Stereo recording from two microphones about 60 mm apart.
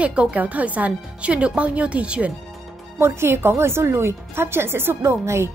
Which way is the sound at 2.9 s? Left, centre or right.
Right.